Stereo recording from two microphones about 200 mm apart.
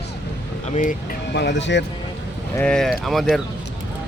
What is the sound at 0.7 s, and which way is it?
Speech, 40° left (ahead or behind).